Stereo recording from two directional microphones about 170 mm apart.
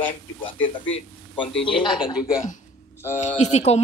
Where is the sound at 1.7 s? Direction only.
30° left (ahead or behind).